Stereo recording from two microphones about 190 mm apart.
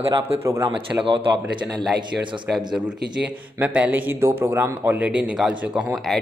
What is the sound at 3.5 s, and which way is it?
A man's voice, 10° right (ahead or behind).